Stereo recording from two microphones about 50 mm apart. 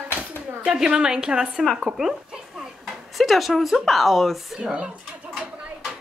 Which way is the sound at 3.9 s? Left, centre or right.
Centre.